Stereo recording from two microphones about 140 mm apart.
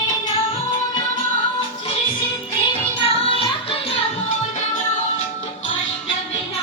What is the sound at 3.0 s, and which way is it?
Music, 40° left (ahead or behind).